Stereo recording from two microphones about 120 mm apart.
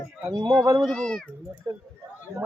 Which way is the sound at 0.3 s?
25° right (ahead or behind).